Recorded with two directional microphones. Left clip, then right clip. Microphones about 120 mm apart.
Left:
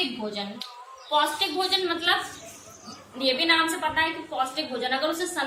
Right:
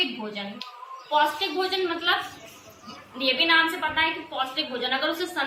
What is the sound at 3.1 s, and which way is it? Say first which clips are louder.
A woman's voice: right 1 dB; 30° left (ahead or behind).